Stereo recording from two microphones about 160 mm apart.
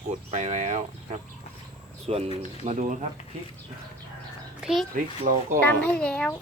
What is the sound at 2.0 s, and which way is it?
Speech, 40° right (ahead or behind).